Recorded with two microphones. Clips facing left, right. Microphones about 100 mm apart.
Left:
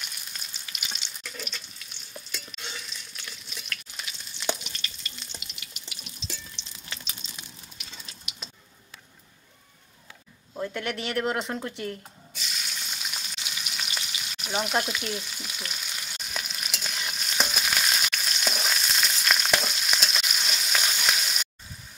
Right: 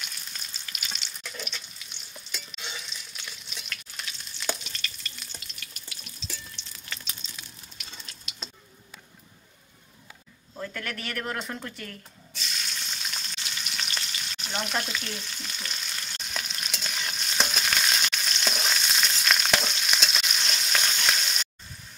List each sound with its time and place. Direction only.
0.0 s frying: 5° left (ahead or behind)
1.0 s water tap: centre (ahead or behind)
2.1 s water: centre (ahead or behind)
4.4 s frying: 15° left (ahead or behind)
5.4 s water: 15° left (ahead or behind)
10.5 s speech: 20° left (ahead or behind)
12.4 s frying: 5° left (ahead or behind)